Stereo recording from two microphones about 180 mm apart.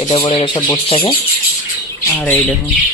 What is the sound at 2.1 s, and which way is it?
Squawk, 10° left (ahead or behind).